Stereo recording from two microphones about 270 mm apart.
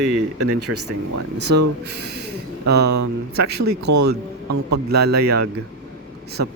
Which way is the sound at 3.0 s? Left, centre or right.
Right.